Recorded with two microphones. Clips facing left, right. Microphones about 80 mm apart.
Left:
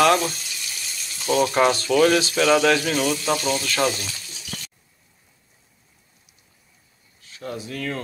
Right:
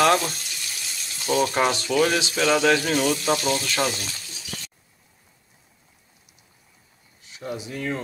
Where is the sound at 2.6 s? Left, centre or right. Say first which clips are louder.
Even; right.